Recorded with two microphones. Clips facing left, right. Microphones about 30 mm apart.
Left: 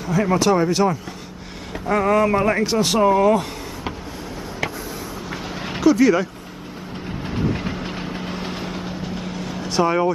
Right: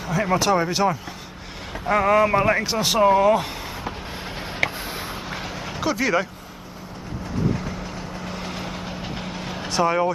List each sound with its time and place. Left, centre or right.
0.0 s a man's voice: centre
5.8 s speech: centre
7.3 s vehicle: left
8.3 s vehicle: centre
9.0 s vehicle: centre
9.7 s speech: centre